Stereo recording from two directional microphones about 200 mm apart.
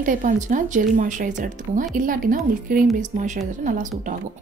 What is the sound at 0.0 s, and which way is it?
A woman's voice, 40° right (ahead or behind).